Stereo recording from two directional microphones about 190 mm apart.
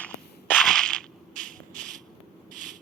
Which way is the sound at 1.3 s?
45° right (ahead or behind).